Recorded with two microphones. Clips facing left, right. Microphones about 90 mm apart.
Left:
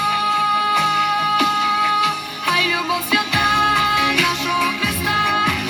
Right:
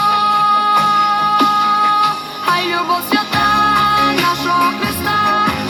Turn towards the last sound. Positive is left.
turn(degrees=-55)  # may be behind; listen again after turning